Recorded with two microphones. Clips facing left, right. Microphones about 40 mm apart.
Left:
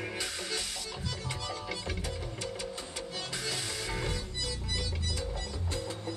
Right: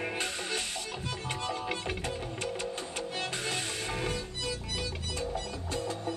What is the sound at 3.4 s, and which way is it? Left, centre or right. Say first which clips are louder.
Music: right 2 dB; right.